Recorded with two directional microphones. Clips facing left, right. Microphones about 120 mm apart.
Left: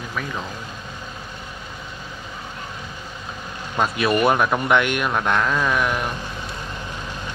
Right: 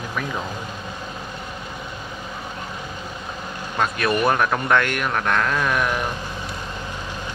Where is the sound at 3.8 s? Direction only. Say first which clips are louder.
Left 2 dB; 15° left (ahead or behind).